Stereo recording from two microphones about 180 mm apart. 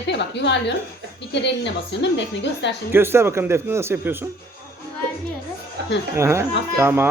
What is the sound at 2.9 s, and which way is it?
Speech, 15° right (ahead or behind).